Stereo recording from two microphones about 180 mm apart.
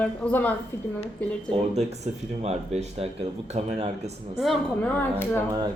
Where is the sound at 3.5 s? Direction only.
35° right (ahead or behind).